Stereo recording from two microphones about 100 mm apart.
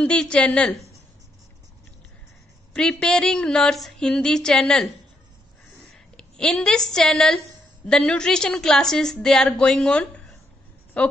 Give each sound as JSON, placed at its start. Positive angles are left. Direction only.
{"t": 0.0, "sound": "a woman's voice", "side_deg": 10}
{"t": 2.7, "sound": "a woman's voice", "side_deg": 5}
{"t": 5.9, "sound": "a woman's voice", "side_deg": 5}